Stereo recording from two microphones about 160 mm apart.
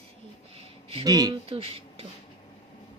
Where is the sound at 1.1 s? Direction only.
25° right (ahead or behind).